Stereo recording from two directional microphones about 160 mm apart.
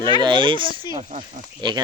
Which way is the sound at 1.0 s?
50° right (ahead or behind).